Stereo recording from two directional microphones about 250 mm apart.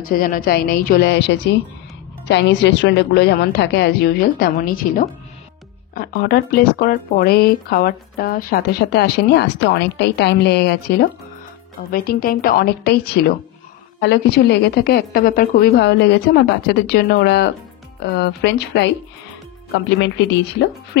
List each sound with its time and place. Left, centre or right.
0.1 s speech: left
20.9 s speech: left